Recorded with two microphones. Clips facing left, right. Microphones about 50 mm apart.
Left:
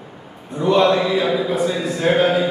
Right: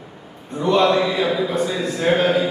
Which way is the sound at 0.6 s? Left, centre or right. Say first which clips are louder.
Left 1 dB; centre.